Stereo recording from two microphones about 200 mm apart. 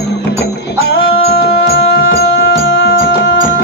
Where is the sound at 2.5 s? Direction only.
75° left (ahead or behind).